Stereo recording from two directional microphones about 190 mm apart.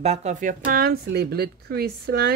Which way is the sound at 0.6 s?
50° right (ahead or behind).